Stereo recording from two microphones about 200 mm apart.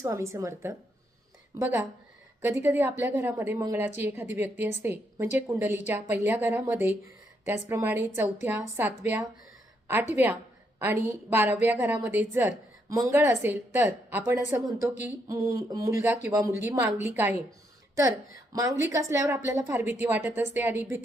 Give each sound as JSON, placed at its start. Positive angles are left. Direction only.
{"t": 0.0, "sound": "a woman's voice", "side_deg": -15}
{"t": 18.5, "sound": "a woman's voice", "side_deg": -15}